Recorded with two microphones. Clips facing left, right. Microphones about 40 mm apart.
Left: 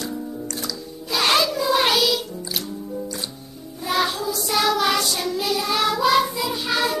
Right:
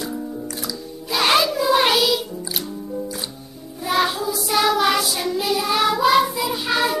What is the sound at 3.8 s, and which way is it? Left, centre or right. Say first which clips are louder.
Music: right 2 dB; centre.